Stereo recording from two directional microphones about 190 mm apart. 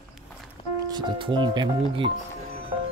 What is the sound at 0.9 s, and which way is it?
Music, 25° right (ahead or behind).